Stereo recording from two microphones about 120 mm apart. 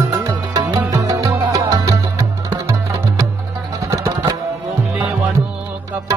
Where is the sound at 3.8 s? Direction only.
25° right (ahead or behind).